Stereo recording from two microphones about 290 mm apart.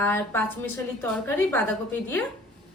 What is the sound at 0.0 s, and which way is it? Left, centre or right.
A woman's voice, centre.